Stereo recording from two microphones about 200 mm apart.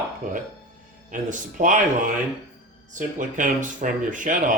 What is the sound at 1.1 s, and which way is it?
Speech, 40° right (ahead or behind).